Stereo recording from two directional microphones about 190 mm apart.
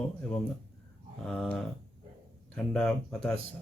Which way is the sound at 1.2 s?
5° left (ahead or behind).